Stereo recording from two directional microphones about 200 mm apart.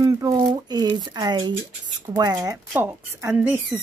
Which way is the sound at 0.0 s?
15° right (ahead or behind).